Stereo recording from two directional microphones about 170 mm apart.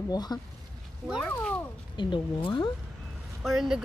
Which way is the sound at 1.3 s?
5° left (ahead or behind).